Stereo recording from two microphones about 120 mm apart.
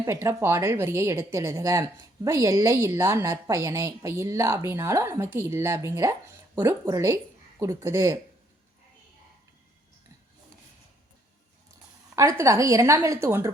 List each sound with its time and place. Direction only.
0.0 s a woman's voice: 25° right (ahead or behind)
12.1 s a woman's voice: 25° right (ahead or behind)